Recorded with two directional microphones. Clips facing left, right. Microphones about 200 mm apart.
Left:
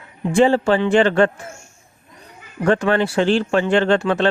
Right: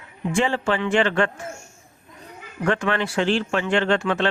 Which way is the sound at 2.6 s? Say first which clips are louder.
Left 6 dB; 35° left (ahead or behind).